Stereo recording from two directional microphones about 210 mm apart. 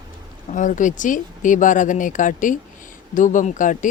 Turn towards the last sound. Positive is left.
turn(degrees=40)  # may be behind; listen again after turning